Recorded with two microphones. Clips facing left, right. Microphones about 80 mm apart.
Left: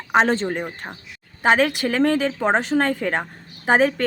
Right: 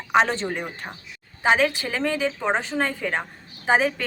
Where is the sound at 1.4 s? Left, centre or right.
Left.